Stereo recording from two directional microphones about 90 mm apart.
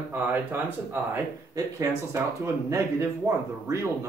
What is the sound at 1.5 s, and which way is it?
Speech, 30° right (ahead or behind).